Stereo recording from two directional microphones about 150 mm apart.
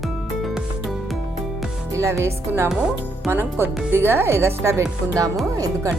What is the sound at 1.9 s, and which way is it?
Speech, 20° right (ahead or behind).